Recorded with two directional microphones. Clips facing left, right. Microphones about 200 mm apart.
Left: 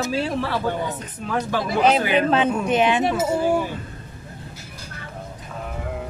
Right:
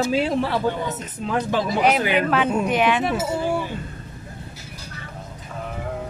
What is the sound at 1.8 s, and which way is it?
Speech, 25° left (ahead or behind).